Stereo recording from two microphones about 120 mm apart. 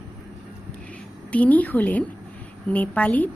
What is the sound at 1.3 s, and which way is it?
A woman's voice, 10° left (ahead or behind).